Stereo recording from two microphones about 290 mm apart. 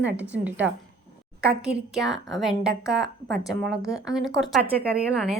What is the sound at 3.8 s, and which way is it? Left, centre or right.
Speech, centre.